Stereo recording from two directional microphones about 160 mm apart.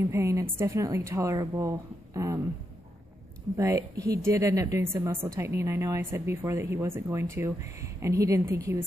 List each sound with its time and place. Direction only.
0.0 s a woman's voice: 15° right (ahead or behind)
3.5 s a woman's voice: 20° right (ahead or behind)